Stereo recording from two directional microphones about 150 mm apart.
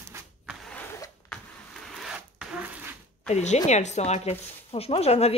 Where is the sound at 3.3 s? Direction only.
50° left (ahead or behind).